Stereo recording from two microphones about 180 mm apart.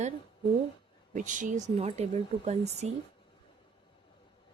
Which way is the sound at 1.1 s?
45° right (ahead or behind).